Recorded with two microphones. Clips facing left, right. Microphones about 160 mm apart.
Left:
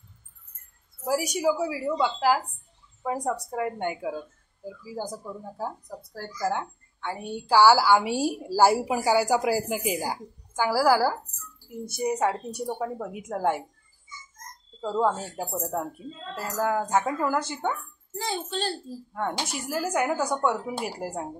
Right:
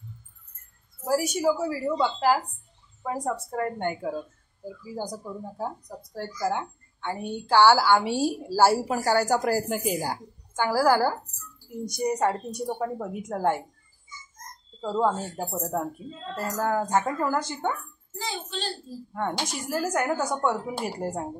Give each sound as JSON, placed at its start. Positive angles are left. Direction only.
{"t": 1.0, "sound": "a woman's voice", "side_deg": 10}
{"t": 5.1, "sound": "a woman's voice", "side_deg": 0}
{"t": 14.8, "sound": "a woman's voice", "side_deg": 0}
{"t": 18.2, "sound": "a child's voice", "side_deg": 50}
{"t": 19.1, "sound": "a woman's voice", "side_deg": 0}
{"t": 20.2, "sound": "speech", "side_deg": -5}
{"t": 21.0, "sound": "speech", "side_deg": 5}